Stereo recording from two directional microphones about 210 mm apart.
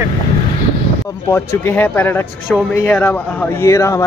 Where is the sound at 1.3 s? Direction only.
10° left (ahead or behind).